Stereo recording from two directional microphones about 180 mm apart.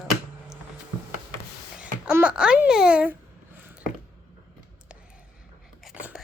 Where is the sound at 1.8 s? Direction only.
5° right (ahead or behind).